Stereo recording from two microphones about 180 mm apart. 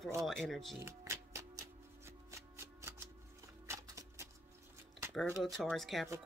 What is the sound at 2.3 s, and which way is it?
Shuffling cards, 15° right (ahead or behind).